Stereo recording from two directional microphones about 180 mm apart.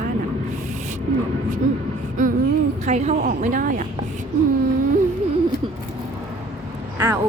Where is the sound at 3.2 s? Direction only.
50° right (ahead or behind).